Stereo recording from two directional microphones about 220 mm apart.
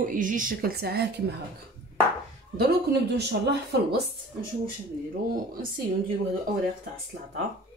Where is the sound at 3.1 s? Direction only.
50° right (ahead or behind).